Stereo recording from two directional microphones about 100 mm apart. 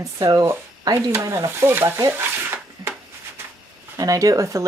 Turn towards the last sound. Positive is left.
turn(degrees=-35)  # may be behind; listen again after turning